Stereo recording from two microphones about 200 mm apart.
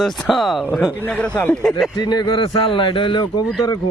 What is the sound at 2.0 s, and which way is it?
A man's voice, 20° left (ahead or behind).